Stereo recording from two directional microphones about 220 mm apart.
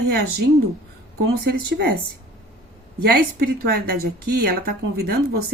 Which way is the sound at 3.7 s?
45° right (ahead or behind).